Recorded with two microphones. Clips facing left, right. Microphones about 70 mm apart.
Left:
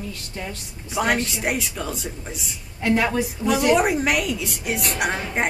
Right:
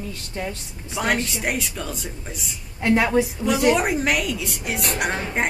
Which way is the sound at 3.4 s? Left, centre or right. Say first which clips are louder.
Left 4 dB; centre.